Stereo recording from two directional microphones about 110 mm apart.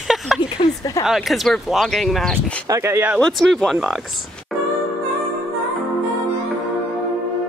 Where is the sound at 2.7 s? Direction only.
25° right (ahead or behind).